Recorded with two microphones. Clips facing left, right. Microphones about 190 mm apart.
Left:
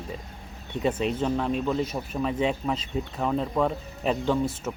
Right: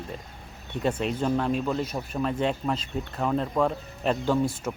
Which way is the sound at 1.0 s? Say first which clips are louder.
Even; centre (ahead or behind).